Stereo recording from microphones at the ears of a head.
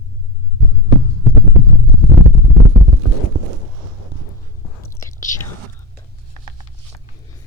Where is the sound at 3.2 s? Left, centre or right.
Right.